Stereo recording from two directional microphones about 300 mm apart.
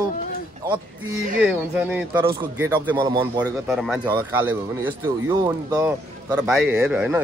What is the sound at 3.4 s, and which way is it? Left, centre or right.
Speech, centre.